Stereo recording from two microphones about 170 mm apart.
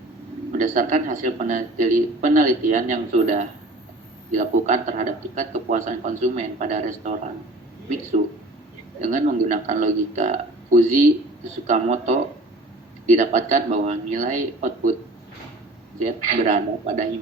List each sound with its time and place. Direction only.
0.5 s speech: 50° right (ahead or behind)
9.0 s speech: 50° right (ahead or behind)
16.0 s speech: 50° right (ahead or behind)